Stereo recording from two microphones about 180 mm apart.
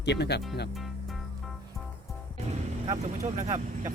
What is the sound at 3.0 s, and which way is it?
Speech, 40° right (ahead or behind).